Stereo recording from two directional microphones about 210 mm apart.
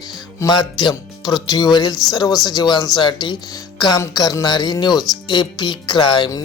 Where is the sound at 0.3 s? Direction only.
20° left (ahead or behind).